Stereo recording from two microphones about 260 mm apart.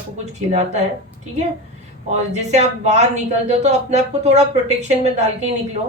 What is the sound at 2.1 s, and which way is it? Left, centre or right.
Speech, right.